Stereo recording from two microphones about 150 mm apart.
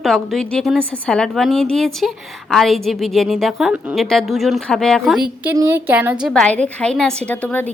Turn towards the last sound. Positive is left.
turn(degrees=10)  # may be behind; listen again after turning